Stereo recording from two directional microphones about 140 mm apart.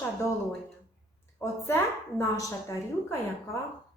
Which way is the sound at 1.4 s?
20° left (ahead or behind).